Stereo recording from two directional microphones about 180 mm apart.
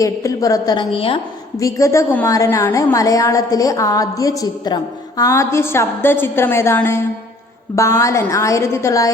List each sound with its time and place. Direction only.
0.0 s a woman's voice: 20° left (ahead or behind)
1.5 s a woman's voice: 15° left (ahead or behind)